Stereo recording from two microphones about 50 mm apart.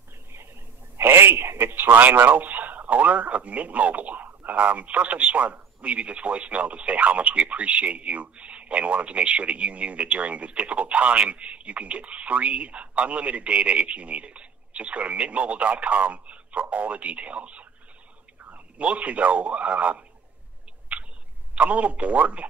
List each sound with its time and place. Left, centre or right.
0.9 s speech: right
20.9 s a sound: right
21.5 s speech: right